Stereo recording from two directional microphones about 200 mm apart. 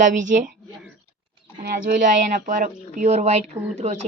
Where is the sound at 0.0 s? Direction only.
40° right (ahead or behind).